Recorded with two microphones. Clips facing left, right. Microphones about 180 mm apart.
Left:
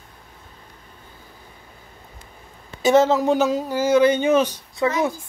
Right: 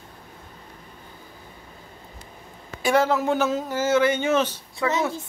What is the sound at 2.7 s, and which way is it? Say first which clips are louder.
Speech: left 5 dB; 20° left (ahead or behind).